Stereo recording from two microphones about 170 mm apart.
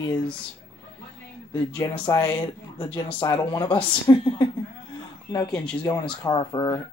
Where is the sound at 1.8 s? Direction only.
20° left (ahead or behind).